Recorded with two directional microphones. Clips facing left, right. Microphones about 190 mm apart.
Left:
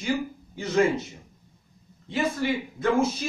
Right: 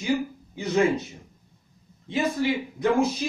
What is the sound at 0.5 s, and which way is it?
Speech, 15° right (ahead or behind).